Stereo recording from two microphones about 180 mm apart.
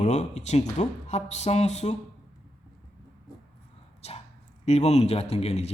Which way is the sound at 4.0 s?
35° left (ahead or behind).